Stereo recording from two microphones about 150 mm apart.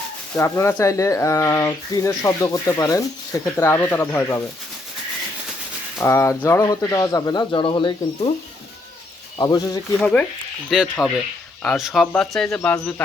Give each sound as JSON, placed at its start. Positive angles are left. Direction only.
{"t": 0.3, "sound": "speech", "side_deg": 20}
{"t": 6.0, "sound": "speech", "side_deg": 15}
{"t": 9.4, "sound": "speech", "side_deg": 25}
{"t": 10.0, "sound": "speech", "side_deg": 10}
{"t": 10.7, "sound": "speech", "side_deg": 0}